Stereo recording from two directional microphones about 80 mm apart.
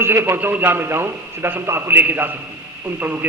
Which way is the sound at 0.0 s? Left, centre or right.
Right.